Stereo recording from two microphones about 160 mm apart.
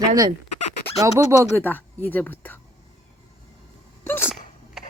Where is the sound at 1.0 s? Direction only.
15° right (ahead or behind).